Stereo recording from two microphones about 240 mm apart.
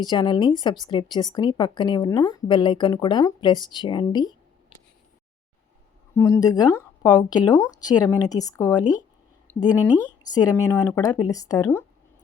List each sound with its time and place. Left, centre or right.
0.0 s a woman's voice: centre
6.1 s a woman's voice: centre
9.5 s a sound: centre
10.3 s a woman's voice: centre